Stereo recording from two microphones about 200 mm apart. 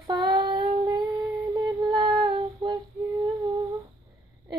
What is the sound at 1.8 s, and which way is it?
Female singing, 20° right (ahead or behind).